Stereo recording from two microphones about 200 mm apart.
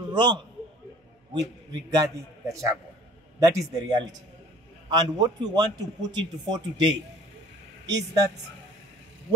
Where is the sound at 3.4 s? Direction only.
15° right (ahead or behind).